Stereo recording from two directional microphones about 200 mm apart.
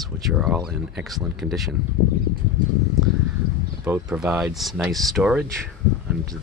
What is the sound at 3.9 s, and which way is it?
Speech, 5° right (ahead or behind).